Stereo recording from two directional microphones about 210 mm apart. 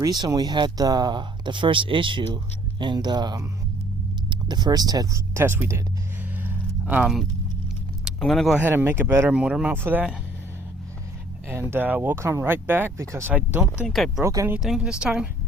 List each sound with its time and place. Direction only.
0.0 s speech: 20° right (ahead or behind)
6.3 s a sound: 10° right (ahead or behind)
8.0 s speech: centre (ahead or behind)
11.4 s a woman's voice: 10° right (ahead or behind)
14.2 s a woman's voice: 15° right (ahead or behind)